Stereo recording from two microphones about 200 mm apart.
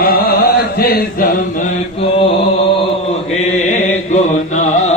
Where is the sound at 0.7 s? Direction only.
45° left (ahead or behind).